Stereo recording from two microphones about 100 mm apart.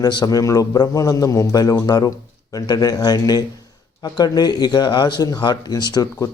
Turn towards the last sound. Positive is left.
turn(degrees=40)  # may be behind; listen again after turning